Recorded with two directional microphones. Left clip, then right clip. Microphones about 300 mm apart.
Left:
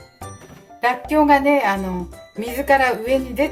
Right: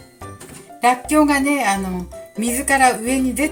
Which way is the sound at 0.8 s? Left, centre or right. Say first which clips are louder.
Right 2 dB; centre.